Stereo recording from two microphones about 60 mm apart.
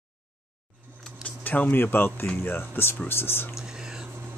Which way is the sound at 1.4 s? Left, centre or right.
Left.